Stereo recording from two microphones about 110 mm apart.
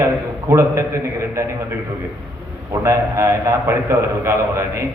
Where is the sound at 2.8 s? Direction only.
25° right (ahead or behind).